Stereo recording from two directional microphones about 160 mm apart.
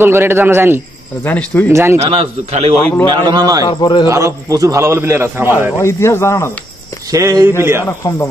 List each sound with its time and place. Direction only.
0.0 s a man's voice: 15° right (ahead or behind)
1.2 s speech: 10° left (ahead or behind)
1.7 s a man's voice: 15° right (ahead or behind)
2.0 s a man's voice: 40° right (ahead or behind)
3.1 s a man's voice: 25° right (ahead or behind)
3.6 s a man's voice: 30° left (ahead or behind)
4.1 s a man's voice: 20° right (ahead or behind)
5.8 s speech: 15° left (ahead or behind)
7.1 s a man's voice: 20° right (ahead or behind)